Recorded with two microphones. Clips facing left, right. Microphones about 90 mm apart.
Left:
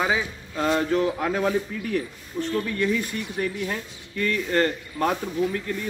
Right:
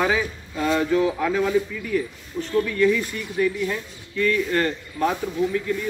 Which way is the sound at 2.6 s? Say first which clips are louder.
Right 6 dB; 30° left (ahead or behind).